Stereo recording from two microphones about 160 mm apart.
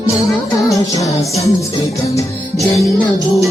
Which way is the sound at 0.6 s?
20° left (ahead or behind).